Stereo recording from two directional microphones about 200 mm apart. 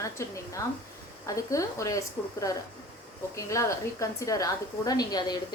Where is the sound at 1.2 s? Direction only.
15° left (ahead or behind).